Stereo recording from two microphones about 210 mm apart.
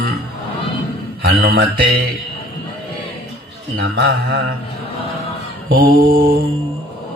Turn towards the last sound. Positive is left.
turn(degrees=-45)  # may be behind; listen again after turning